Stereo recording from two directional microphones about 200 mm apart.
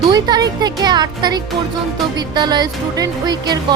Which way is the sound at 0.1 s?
20° right (ahead or behind).